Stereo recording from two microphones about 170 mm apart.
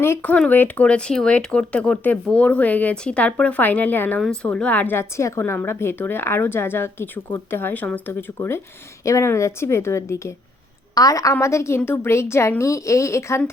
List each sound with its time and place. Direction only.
0.0 s speech: 10° left (ahead or behind)